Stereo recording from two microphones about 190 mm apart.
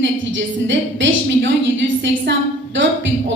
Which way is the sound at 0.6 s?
75° right (ahead or behind).